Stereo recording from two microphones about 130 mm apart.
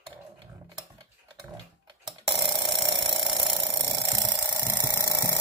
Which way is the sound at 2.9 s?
35° right (ahead or behind).